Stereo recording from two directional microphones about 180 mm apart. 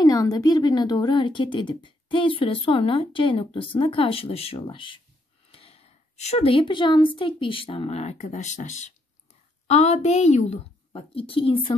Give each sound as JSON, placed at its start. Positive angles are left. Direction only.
{"t": 0.0, "sound": "a woman's voice", "side_deg": 20}